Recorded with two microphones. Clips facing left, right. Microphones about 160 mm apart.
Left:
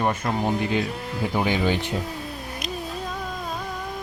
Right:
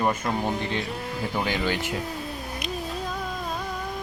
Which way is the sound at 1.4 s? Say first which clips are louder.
Left 4 dB; 15° left (ahead or behind).